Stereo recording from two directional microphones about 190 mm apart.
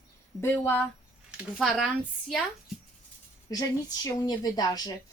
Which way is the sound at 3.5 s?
20° left (ahead or behind).